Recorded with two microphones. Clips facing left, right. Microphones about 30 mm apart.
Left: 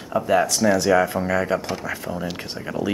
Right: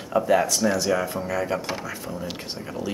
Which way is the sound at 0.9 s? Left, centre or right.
Left.